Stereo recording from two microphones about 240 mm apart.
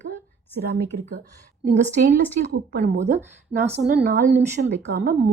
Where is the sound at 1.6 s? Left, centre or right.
Right.